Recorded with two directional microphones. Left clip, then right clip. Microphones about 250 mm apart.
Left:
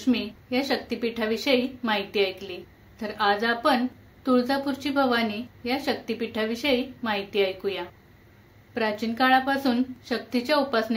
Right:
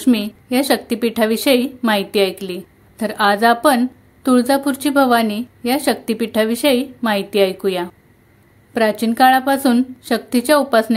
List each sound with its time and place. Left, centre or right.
0.0 s a woman's voice: right